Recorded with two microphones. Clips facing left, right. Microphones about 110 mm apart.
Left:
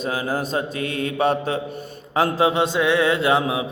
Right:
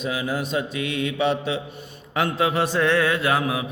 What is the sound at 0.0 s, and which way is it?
Mantra, 40° left (ahead or behind).